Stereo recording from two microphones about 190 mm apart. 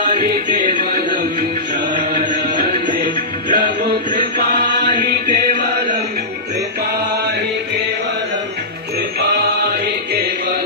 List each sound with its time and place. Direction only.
0.7 s music: 25° left (ahead or behind)
3.0 s music: 50° right (ahead or behind)
4.6 s chant: 25° left (ahead or behind)
5.0 s music: 50° right (ahead or behind)